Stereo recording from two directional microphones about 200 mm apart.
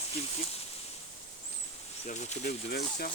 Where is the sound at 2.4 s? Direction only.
50° left (ahead or behind).